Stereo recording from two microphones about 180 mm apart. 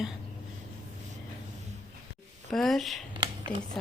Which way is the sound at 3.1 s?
25° right (ahead or behind).